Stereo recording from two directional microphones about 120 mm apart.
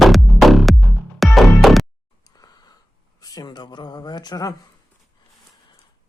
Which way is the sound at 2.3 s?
30° left (ahead or behind).